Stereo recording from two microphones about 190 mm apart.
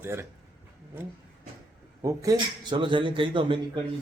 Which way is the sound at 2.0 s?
20° right (ahead or behind).